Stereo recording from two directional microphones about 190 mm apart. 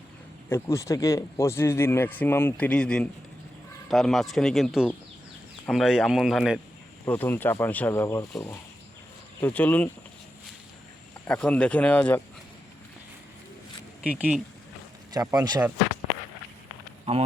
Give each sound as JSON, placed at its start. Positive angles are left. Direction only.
{"t": 0.5, "sound": "a man's voice", "side_deg": 15}
{"t": 7.0, "sound": "speech", "side_deg": 10}
{"t": 11.3, "sound": "speech", "side_deg": 5}
{"t": 14.1, "sound": "a man's voice", "side_deg": -5}
{"t": 15.1, "sound": "speech", "side_deg": -20}